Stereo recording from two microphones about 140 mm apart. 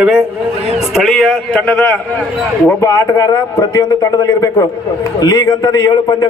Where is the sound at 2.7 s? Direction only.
20° left (ahead or behind).